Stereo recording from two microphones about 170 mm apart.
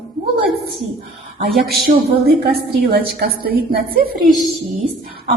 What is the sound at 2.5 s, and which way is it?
A woman's voice, 65° right (ahead or behind).